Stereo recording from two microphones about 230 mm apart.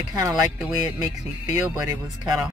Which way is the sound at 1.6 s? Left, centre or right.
Centre.